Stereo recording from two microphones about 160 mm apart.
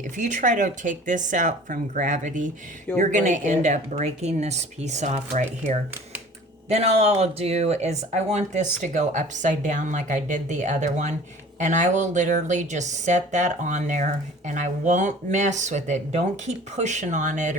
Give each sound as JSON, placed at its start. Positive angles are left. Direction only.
{"t": 0.2, "sound": "speech", "side_deg": -50}